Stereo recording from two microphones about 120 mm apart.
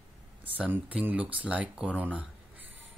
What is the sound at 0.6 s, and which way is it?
Speech, 10° right (ahead or behind).